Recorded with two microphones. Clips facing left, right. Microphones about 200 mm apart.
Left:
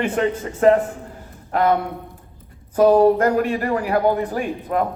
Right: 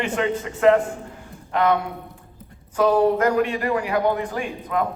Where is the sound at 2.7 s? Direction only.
40° left (ahead or behind).